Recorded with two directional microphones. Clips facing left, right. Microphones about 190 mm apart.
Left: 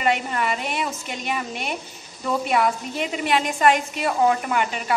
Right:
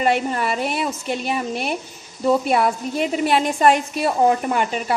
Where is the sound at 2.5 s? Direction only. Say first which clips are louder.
Right 2 dB; 35° right (ahead or behind).